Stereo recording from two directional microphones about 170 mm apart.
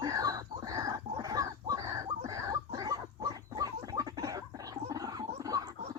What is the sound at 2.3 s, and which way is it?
Gargling, 20° right (ahead or behind).